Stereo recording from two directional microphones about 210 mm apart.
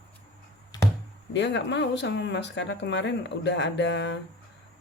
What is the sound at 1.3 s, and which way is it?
Speech, 60° left (ahead or behind).